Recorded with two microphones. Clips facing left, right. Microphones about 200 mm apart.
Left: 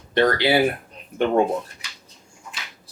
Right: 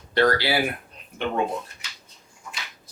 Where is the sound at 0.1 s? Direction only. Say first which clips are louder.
Left 2 dB; 20° left (ahead or behind).